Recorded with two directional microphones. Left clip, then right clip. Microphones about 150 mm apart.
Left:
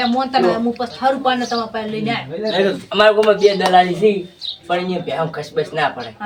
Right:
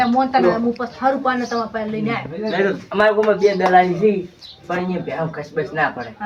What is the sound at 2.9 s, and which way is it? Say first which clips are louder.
Speech: left 4 dB; centre (ahead or behind).